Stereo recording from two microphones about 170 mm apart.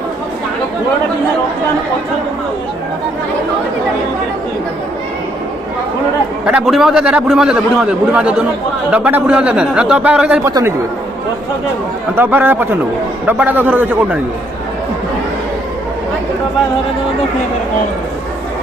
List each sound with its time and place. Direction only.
6.4 s a man's voice: 5° right (ahead or behind)
12.1 s speech: 10° right (ahead or behind)